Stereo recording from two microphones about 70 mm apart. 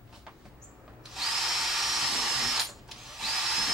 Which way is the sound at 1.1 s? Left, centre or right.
Centre.